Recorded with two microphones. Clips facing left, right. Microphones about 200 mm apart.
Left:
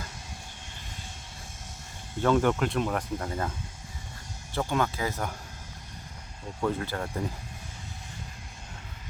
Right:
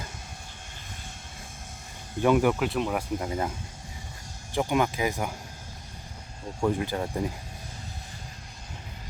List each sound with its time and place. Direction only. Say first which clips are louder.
2.2 s speech: right 2 dB; 10° right (ahead or behind)
4.5 s speech: right 3 dB; 15° right (ahead or behind)
6.6 s speech: right 3 dB; 15° right (ahead or behind)